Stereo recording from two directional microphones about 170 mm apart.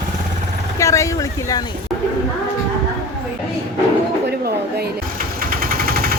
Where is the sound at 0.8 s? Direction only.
20° left (ahead or behind).